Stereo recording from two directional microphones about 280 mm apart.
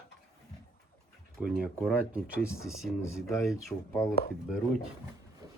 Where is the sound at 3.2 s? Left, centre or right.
Centre.